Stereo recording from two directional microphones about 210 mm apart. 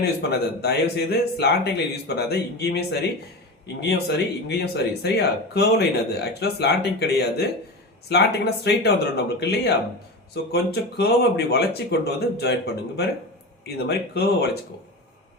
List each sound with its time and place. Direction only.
0.0 s speech: 50° left (ahead or behind)